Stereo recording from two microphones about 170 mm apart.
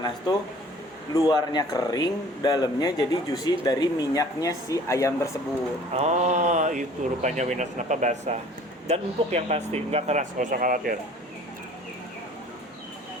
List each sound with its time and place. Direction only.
1.1 s speech: 25° left (ahead or behind)
5.9 s speech: 40° right (ahead or behind)